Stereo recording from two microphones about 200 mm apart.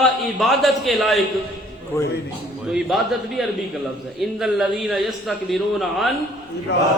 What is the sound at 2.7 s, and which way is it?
A man's voice, centre (ahead or behind).